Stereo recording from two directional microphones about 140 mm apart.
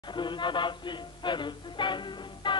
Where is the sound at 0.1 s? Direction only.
35° left (ahead or behind).